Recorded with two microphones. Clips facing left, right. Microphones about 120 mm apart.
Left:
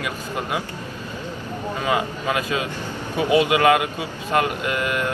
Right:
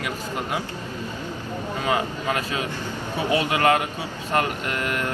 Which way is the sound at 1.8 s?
15° left (ahead or behind).